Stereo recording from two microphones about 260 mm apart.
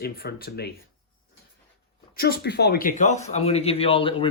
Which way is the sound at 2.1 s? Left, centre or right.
Left.